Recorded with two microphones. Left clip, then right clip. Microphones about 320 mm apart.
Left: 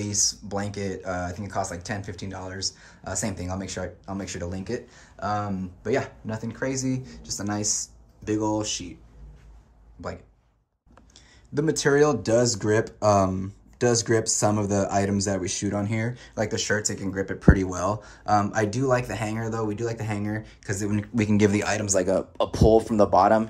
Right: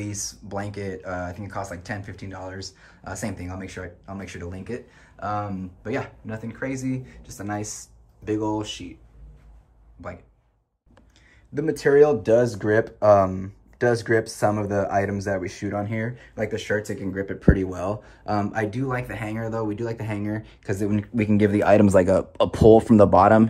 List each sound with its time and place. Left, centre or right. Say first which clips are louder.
0.0 s speech: left 7 dB; centre
10.0 s speech: left 2 dB; centre
11.5 s speech: right 3 dB; centre
22.8 s speech: right 4 dB; right